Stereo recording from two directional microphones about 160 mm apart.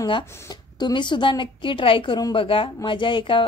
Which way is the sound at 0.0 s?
25° left (ahead or behind).